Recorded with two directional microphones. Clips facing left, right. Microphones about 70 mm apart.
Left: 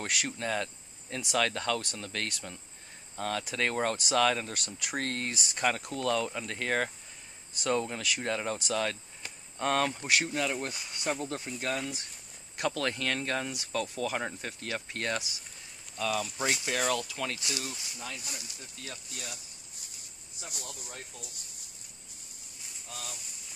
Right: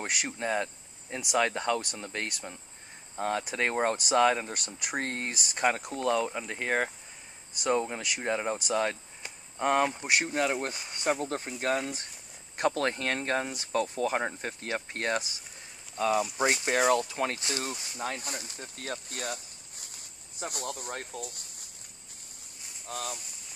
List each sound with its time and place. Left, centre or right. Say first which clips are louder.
0.0 s speech: right 1 dB; right
22.8 s speech: right 8 dB; right